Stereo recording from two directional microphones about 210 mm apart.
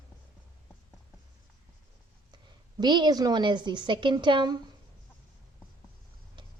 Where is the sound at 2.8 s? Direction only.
20° right (ahead or behind).